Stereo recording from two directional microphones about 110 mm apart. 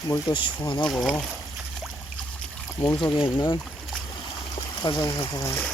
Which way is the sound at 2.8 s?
45° left (ahead or behind).